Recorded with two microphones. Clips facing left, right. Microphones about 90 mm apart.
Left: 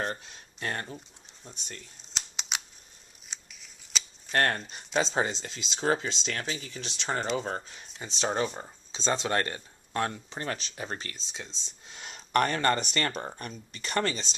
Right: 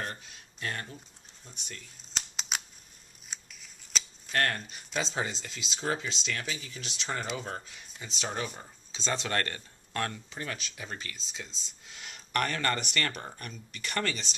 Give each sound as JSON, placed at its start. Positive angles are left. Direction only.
{"t": 0.1, "sound": "speech", "side_deg": 35}
{"t": 2.1, "sound": "a sound", "side_deg": 0}
{"t": 3.3, "sound": "scissors", "side_deg": 0}
{"t": 4.3, "sound": "speech", "side_deg": 35}
{"t": 10.4, "sound": "speech", "side_deg": 40}
{"t": 11.1, "sound": "speech", "side_deg": 25}